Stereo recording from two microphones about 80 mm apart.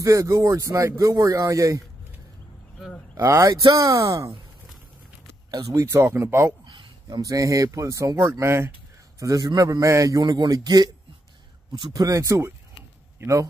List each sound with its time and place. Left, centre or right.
0.0 s speech: right
3.2 s speech: right
5.5 s speech: right
6.6 s a sound: right
7.2 s speech: right
8.4 s speech: right
9.2 s speech: right
9.7 s speech: right
10.2 s speech: right
11.9 s speech: right